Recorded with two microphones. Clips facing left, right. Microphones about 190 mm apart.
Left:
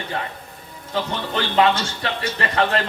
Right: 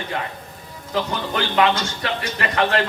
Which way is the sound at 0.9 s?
30° left (ahead or behind).